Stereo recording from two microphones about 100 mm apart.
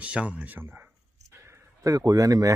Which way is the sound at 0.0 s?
15° right (ahead or behind).